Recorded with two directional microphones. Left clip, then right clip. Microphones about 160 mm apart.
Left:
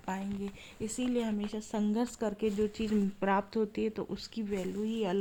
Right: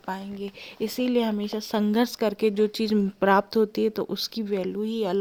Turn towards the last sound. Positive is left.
turn(degrees=-60)  # may be behind; listen again after turning